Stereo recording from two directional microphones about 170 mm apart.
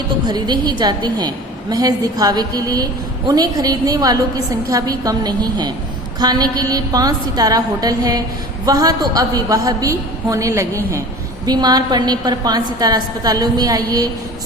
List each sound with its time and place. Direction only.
0.3 s a woman's voice: 25° right (ahead or behind)